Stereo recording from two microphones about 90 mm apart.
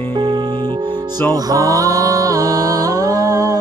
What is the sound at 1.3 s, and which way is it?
Mantra, 40° right (ahead or behind).